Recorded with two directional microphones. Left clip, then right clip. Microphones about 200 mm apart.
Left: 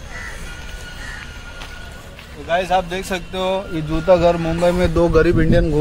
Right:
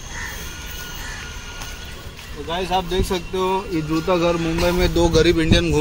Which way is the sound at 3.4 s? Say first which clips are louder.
Left 1 dB; 45° left (ahead or behind).